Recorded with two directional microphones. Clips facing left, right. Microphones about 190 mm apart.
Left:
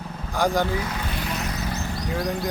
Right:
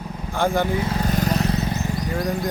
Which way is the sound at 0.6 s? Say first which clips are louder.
Right 4 dB; 25° right (ahead or behind).